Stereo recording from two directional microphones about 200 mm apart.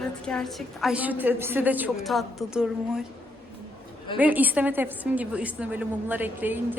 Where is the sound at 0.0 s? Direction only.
5° left (ahead or behind).